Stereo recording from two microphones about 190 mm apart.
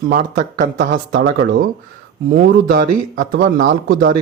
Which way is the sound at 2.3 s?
45° right (ahead or behind).